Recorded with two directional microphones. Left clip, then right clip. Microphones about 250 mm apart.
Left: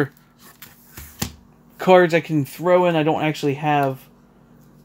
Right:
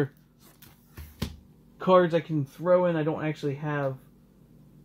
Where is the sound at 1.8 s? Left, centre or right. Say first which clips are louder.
Left 7 dB; left.